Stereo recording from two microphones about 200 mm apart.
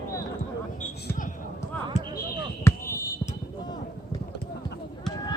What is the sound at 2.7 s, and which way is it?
Basketball bounce, 15° left (ahead or behind).